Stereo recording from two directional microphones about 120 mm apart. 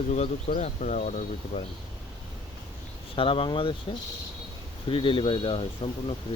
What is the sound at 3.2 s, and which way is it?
Speech, 45° left (ahead or behind).